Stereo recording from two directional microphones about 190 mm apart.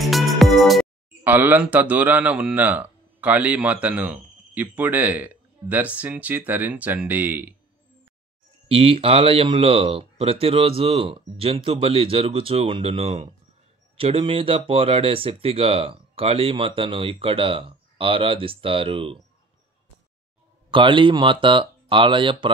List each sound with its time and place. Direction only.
0.0 s music: centre (ahead or behind)
1.2 s speech: 10° right (ahead or behind)
8.6 s speech: 30° right (ahead or behind)
20.7 s speech: 25° right (ahead or behind)